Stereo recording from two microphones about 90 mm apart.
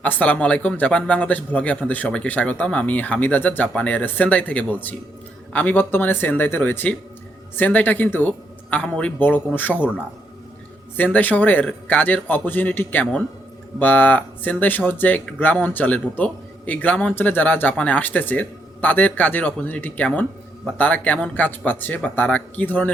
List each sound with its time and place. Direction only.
0.0 s speech: 15° left (ahead or behind)
10.9 s speech: 20° left (ahead or behind)